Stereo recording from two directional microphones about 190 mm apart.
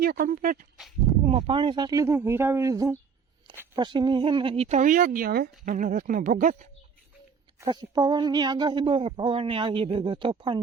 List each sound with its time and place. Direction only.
0.0 s speech: 50° right (ahead or behind)
1.2 s speech: 30° right (ahead or behind)
7.6 s speech: 20° right (ahead or behind)